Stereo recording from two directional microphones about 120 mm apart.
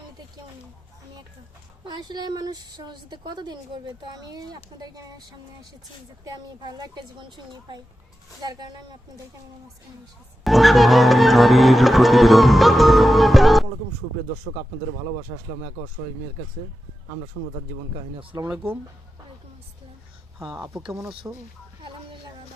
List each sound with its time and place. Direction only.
1.8 s a woman's voice: 40° right (ahead or behind)
6.2 s a woman's voice: 35° right (ahead or behind)
10.4 s music: centre (ahead or behind)
18.4 s speech: 10° right (ahead or behind)
21.2 s speech: 15° right (ahead or behind)